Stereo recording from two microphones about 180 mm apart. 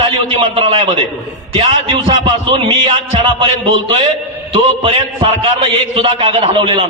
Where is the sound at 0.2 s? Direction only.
30° right (ahead or behind).